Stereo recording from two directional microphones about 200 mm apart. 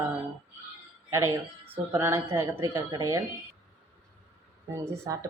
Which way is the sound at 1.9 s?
15° right (ahead or behind).